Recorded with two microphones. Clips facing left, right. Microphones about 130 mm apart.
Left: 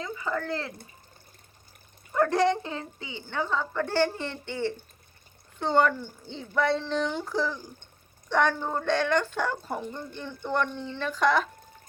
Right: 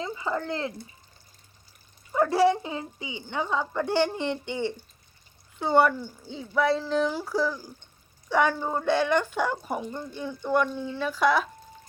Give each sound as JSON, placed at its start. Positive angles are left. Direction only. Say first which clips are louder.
{"t": 0.0, "sound": "speech", "louder": "right 1 dB", "side_deg": -25}
{"t": 2.1, "sound": "speech", "louder": "right 2 dB", "side_deg": -10}